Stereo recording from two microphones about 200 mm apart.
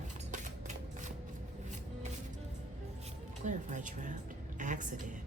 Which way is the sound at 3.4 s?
40° right (ahead or behind).